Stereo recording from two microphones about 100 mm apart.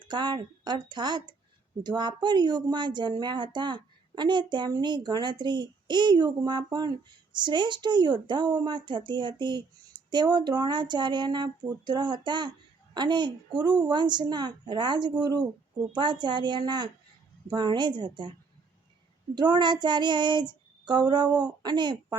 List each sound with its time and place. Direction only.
0.0 s speech: 50° right (ahead or behind)